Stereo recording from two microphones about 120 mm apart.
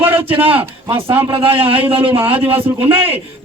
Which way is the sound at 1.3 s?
50° right (ahead or behind).